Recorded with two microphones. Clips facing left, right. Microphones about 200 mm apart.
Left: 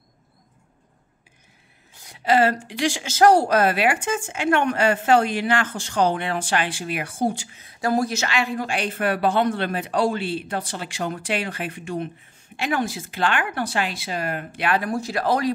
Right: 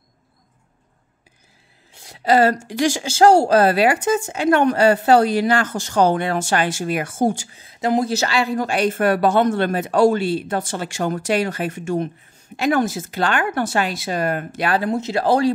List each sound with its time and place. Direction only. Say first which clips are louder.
2.0 s a woman's voice: right 3 dB; 40° right (ahead or behind)
3.1 s a woman's voice: right 3 dB; 30° right (ahead or behind); by 7.4 s 45° right (ahead or behind)
7.5 s speech: right 3 dB; 25° right (ahead or behind)
8.1 s speech: right 5 dB; 35° right (ahead or behind)
14.8 s speech: right 4 dB; 20° right (ahead or behind)